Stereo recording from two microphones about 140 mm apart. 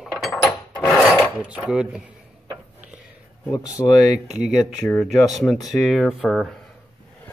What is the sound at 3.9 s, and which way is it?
Speech, 5° right (ahead or behind).